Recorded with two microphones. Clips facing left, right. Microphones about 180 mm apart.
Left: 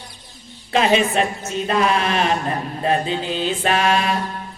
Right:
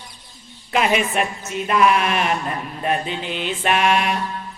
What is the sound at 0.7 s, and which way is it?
Speech, 30° left (ahead or behind).